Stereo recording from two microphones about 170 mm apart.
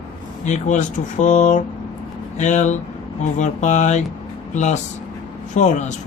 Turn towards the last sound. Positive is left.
turn(degrees=45)  # may be behind; listen again after turning